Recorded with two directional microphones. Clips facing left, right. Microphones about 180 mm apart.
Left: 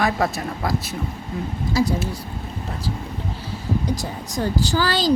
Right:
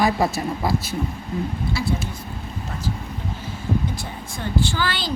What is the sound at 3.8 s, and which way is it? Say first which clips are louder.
Speech: left 4 dB; 40° left (ahead or behind).